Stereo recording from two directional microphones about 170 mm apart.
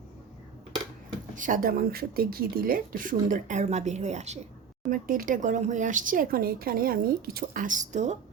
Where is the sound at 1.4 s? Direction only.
50° right (ahead or behind).